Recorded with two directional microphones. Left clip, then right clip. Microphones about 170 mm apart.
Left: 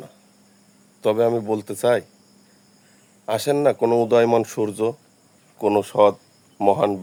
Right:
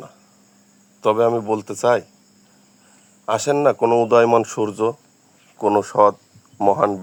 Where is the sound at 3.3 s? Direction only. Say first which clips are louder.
Right 2 dB; centre (ahead or behind).